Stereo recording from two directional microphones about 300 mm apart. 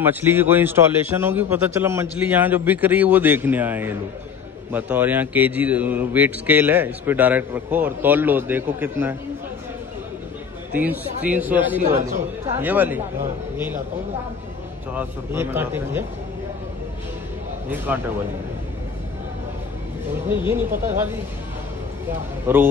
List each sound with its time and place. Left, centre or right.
0.0 s a man's voice: centre
10.7 s a man's voice: centre
11.8 s a man's voice: right
12.5 s a man's voice: centre
15.0 s a man's voice: centre
17.6 s a man's voice: centre
20.2 s a man's voice: centre
22.5 s a man's voice: centre